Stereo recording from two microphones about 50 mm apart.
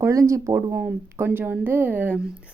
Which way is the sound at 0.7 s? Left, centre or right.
Right.